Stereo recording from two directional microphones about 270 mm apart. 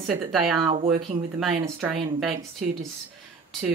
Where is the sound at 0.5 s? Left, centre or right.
Centre.